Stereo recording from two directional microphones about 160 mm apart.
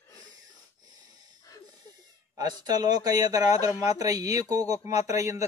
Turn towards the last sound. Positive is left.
turn(degrees=-20)  # may be behind; listen again after turning